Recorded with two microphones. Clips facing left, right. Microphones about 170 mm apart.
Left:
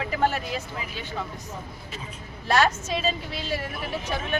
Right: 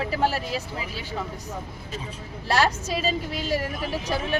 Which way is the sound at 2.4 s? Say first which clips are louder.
Left 1 dB; 35° right (ahead or behind).